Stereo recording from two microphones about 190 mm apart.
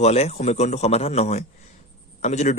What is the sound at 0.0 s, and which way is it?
Speech, 35° left (ahead or behind).